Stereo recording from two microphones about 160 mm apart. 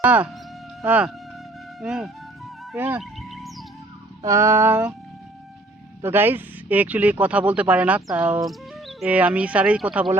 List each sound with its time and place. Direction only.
0.0 s speech: 10° right (ahead or behind)
3.0 s music: centre (ahead or behind)
4.2 s speech: 20° right (ahead or behind)
6.0 s speech: 15° right (ahead or behind)